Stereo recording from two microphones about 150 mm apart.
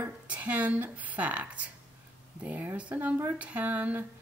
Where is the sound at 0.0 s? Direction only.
10° right (ahead or behind).